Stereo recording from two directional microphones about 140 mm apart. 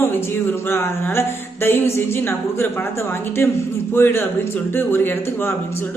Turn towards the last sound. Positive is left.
turn(degrees=15)  # may be behind; listen again after turning